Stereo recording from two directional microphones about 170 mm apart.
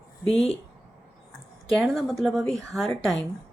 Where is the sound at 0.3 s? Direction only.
35° left (ahead or behind).